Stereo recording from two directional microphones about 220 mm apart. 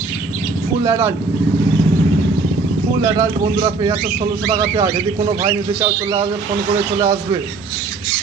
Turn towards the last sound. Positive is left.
turn(degrees=-20)  # may be behind; listen again after turning